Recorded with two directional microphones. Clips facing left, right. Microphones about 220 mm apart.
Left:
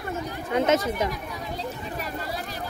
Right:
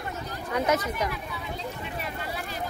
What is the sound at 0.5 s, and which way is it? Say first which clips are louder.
Speech: left 4 dB; 25° left (ahead or behind).